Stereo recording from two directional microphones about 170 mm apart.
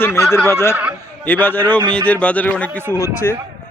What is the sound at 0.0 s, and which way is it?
Speech, 15° left (ahead or behind).